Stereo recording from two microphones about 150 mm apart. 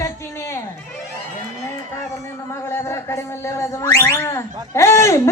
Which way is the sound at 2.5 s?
15° left (ahead or behind).